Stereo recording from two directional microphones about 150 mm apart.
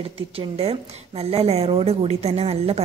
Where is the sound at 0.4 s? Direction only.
40° right (ahead or behind).